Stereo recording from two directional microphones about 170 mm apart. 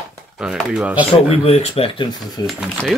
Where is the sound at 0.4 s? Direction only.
5° right (ahead or behind).